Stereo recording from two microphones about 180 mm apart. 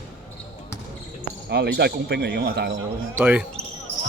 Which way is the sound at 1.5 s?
65° right (ahead or behind).